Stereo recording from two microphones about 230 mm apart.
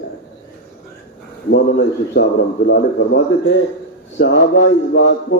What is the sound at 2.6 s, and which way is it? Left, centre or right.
Speech, left.